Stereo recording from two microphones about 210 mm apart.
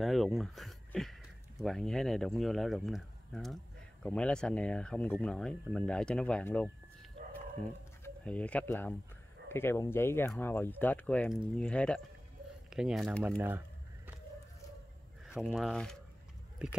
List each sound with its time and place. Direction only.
0.0 s a sound: centre (ahead or behind)
1.6 s speech: centre (ahead or behind)
15.2 s speech: 5° right (ahead or behind)